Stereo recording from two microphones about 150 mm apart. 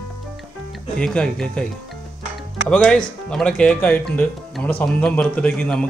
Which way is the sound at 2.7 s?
5° left (ahead or behind).